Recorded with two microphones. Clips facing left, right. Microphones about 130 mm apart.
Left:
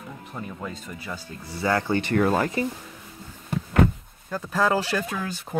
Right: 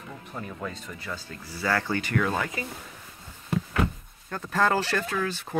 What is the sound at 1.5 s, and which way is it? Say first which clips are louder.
Speech: left 4 dB; 20° left (ahead or behind).